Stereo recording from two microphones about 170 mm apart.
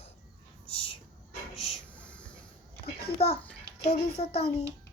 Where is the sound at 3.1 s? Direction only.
70° left (ahead or behind).